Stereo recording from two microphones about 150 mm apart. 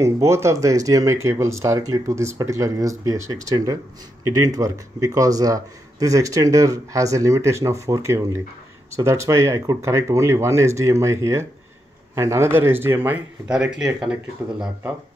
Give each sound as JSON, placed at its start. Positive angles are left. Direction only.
{"t": 0.0, "sound": "speech", "side_deg": -20}